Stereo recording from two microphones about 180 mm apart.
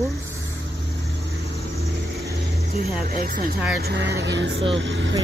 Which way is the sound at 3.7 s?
65° right (ahead or behind).